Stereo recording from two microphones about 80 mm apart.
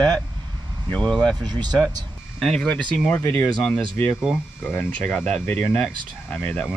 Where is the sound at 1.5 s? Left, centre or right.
Right.